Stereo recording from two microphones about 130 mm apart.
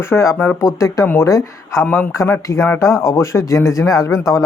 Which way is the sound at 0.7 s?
25° left (ahead or behind).